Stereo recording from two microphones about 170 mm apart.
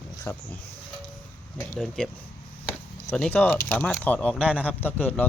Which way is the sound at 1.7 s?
5° left (ahead or behind).